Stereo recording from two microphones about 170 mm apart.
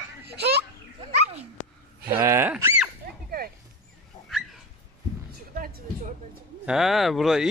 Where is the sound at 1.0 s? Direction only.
35° right (ahead or behind).